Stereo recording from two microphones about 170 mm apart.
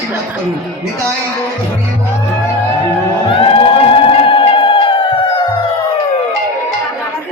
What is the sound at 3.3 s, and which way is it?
Music, 30° left (ahead or behind).